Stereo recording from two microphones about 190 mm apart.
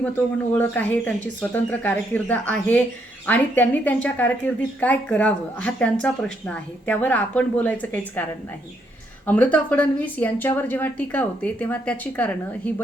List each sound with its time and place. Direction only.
0.5 s a woman's voice: 10° left (ahead or behind)
9.2 s a woman's voice: 10° left (ahead or behind)